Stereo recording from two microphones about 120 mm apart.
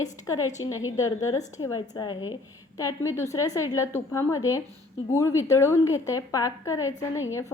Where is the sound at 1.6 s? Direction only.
35° left (ahead or behind).